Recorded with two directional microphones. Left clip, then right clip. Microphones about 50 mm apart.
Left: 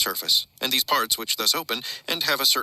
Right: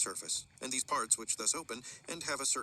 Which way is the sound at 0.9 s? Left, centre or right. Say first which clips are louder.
Left 10 dB; centre.